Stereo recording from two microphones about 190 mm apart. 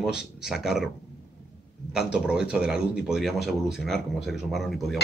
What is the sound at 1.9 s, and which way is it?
Speech, 5° right (ahead or behind).